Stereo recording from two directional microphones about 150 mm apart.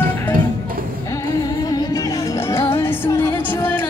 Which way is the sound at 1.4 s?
25° left (ahead or behind).